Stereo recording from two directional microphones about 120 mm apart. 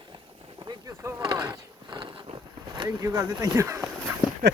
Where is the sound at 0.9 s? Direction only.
25° right (ahead or behind).